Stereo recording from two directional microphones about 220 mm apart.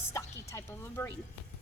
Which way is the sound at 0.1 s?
15° left (ahead or behind).